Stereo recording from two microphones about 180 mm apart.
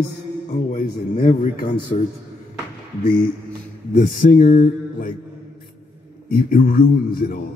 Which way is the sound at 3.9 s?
50° left (ahead or behind).